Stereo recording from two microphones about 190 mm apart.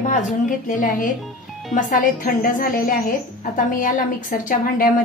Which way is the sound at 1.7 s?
45° left (ahead or behind).